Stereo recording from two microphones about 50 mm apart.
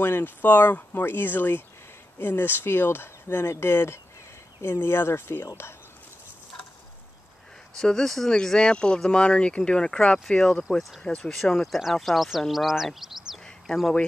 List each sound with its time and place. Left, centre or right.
0.0 s speech: left
7.7 s speech: centre
8.4 s speech: centre
11.5 s speech: centre